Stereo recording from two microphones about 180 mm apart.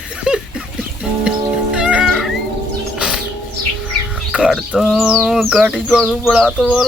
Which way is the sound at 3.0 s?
5° right (ahead or behind).